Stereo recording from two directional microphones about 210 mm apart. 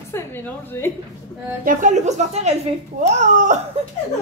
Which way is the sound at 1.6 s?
40° right (ahead or behind).